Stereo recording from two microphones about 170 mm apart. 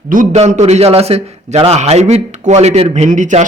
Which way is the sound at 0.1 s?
45° right (ahead or behind).